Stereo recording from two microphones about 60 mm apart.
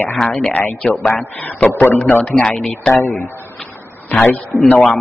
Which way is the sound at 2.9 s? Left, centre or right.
Left.